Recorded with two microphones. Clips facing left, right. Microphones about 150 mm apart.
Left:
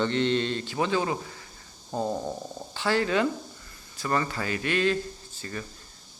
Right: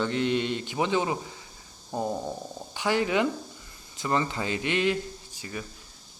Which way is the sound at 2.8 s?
15° right (ahead or behind).